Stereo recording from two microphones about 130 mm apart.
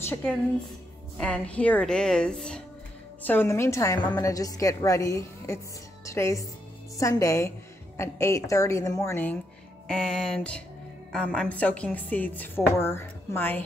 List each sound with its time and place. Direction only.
0.1 s a woman's voice: 10° left (ahead or behind)
9.8 s a sound: 5° left (ahead or behind)
11.1 s speech: 10° left (ahead or behind)